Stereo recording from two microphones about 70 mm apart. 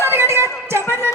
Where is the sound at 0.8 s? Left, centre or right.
Left.